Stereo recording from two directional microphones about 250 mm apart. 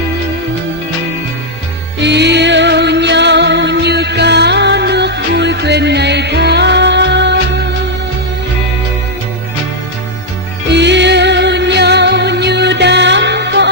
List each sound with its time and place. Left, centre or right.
2.0 s music: right
10.7 s music: right